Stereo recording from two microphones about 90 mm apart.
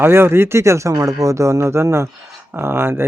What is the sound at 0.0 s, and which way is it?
Speech, 25° right (ahead or behind).